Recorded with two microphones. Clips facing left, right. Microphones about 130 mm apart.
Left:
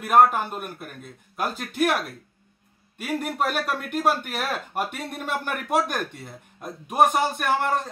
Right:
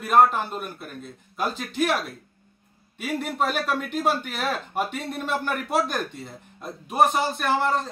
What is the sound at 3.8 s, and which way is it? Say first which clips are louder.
Speech: left 1 dB; 55° left (ahead or behind).